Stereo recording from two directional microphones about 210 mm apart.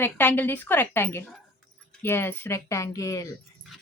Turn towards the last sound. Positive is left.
turn(degrees=15)  # may be behind; listen again after turning